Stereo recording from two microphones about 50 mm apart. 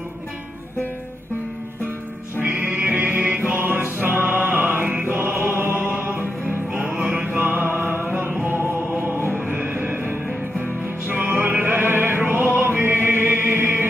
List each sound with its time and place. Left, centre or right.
2.6 s music: right
5.3 s music: right
6.7 s music: centre
7.0 s music: right
7.2 s music: right
9.4 s music: right